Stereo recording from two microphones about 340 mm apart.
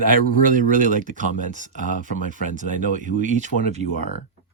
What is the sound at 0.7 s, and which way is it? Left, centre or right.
Speech, right.